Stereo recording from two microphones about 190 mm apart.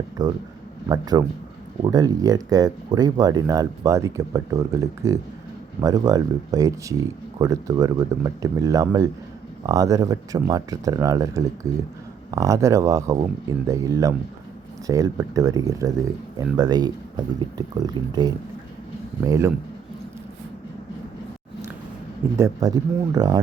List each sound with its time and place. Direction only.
0.2 s speech: 20° right (ahead or behind)
22.4 s speech: 15° right (ahead or behind)